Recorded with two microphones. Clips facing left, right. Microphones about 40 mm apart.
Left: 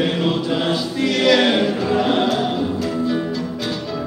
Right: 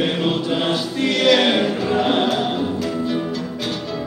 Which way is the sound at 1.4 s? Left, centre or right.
Centre.